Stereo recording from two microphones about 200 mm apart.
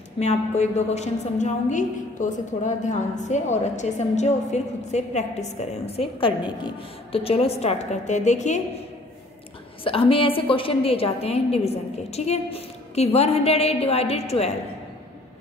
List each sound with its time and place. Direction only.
0.2 s a woman's voice: 35° left (ahead or behind)
9.8 s a woman's voice: 25° left (ahead or behind)